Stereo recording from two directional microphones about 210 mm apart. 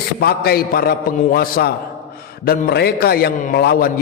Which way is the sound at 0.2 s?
45° left (ahead or behind).